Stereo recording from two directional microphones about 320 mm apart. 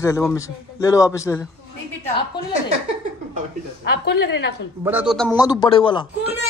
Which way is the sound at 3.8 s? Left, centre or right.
Left.